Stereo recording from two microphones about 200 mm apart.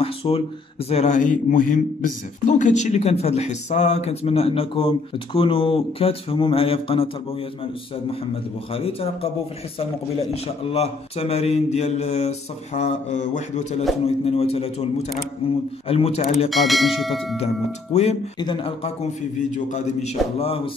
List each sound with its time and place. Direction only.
0.0 s a sound: 30° left (ahead or behind)
0.8 s speech: 35° left (ahead or behind)
8.7 s speech: 30° left (ahead or behind)
10.3 s speech: 30° left (ahead or behind)
16.4 s speech: centre (ahead or behind)
17.9 s speech: 35° left (ahead or behind)